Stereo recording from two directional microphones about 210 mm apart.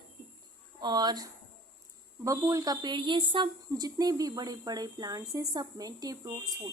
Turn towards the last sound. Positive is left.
turn(degrees=-20)  # may be behind; listen again after turning